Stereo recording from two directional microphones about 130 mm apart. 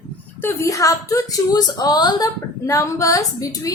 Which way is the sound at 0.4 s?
25° left (ahead or behind).